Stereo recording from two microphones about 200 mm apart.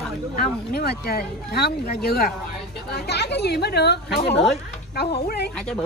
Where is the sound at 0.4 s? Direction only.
50° left (ahead or behind).